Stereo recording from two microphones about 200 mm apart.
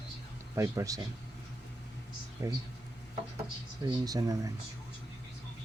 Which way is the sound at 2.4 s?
15° right (ahead or behind).